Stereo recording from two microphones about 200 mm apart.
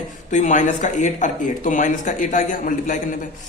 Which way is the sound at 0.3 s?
35° left (ahead or behind).